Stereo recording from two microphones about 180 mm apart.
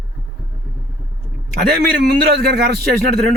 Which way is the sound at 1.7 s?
60° right (ahead or behind).